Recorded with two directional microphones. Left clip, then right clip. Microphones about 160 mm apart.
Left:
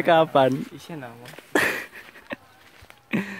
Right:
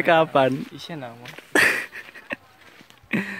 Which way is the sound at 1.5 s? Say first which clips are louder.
Right 4 dB; centre (ahead or behind).